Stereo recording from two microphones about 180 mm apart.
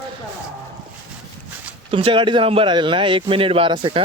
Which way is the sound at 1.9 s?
30° right (ahead or behind).